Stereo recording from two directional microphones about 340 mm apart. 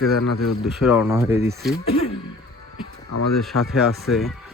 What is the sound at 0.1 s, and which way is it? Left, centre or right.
Speech, left.